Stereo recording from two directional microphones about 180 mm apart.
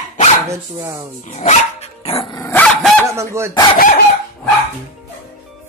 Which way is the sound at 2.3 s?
15° left (ahead or behind).